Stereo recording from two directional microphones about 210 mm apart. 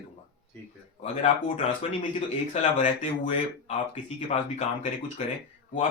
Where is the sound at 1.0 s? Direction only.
30° left (ahead or behind).